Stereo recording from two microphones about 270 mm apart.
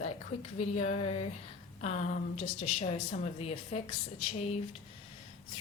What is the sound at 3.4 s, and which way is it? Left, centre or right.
Speech, left.